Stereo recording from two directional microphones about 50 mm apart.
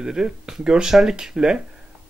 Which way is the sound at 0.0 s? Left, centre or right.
Centre.